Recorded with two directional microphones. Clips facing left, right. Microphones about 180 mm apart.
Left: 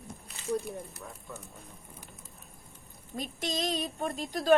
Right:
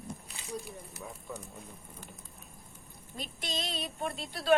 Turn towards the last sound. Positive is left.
turn(degrees=40)  # may be behind; listen again after turning